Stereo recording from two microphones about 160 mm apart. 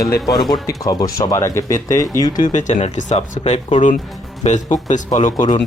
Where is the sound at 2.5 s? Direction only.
50° left (ahead or behind).